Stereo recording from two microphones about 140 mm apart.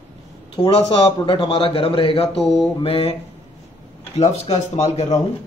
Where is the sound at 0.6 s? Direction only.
45° left (ahead or behind).